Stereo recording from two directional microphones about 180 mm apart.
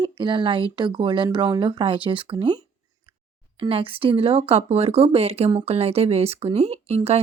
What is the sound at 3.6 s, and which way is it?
Speech, 30° right (ahead or behind).